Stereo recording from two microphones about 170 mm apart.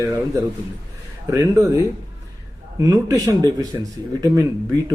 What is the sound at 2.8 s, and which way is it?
Speech, 20° right (ahead or behind).